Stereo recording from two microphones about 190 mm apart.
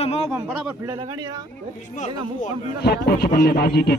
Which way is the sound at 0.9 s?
20° right (ahead or behind).